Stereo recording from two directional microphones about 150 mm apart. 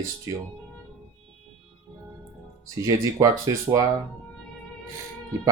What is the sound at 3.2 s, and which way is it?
Speech, 20° right (ahead or behind).